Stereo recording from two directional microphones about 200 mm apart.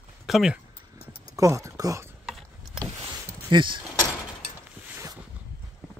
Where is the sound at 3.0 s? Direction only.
25° right (ahead or behind).